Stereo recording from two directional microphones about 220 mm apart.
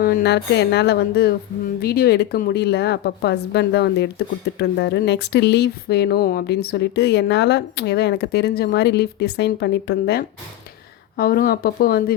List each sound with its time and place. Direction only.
0.0 s speech: 45° left (ahead or behind)